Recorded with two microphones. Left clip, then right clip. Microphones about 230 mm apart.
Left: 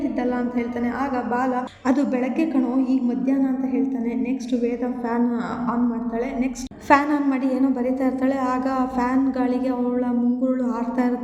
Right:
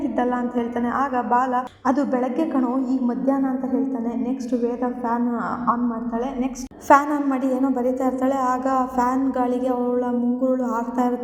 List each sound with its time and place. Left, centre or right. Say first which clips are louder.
1.4 s a woman's voice: right 2 dB; centre
6.4 s a woman's voice: even; centre